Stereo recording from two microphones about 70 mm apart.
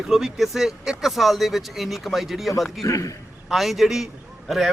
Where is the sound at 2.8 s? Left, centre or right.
Left.